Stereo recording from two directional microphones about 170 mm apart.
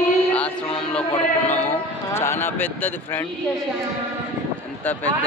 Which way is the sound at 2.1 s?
15° left (ahead or behind).